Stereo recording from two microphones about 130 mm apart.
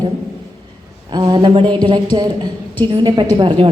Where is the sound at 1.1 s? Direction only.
35° right (ahead or behind).